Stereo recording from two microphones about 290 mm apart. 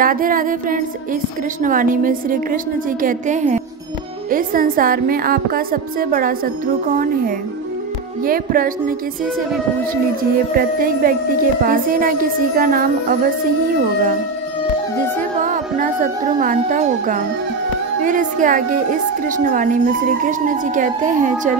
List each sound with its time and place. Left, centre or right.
0.0 s a woman's voice: right
10.5 s a woman's voice: right
15.4 s a woman's voice: right